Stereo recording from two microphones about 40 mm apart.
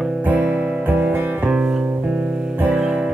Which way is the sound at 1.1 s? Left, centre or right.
Right.